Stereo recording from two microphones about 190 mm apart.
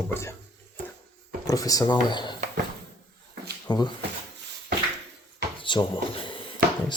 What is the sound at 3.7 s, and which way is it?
Speech, 25° left (ahead or behind).